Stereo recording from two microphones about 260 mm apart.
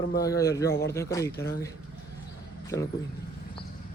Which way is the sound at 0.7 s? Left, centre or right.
Left.